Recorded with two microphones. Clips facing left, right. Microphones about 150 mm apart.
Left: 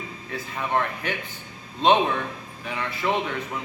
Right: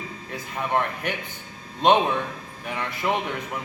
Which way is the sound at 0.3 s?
15° right (ahead or behind).